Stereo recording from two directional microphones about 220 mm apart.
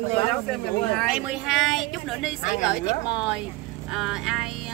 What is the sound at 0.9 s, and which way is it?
Speech, 5° right (ahead or behind).